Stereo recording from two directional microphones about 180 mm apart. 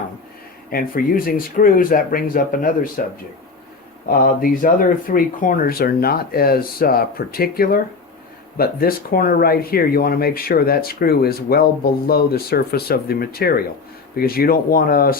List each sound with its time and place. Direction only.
0.7 s speech: 50° left (ahead or behind)
4.1 s speech: 55° left (ahead or behind)